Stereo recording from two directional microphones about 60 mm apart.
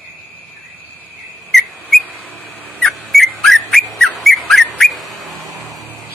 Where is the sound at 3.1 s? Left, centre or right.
Centre.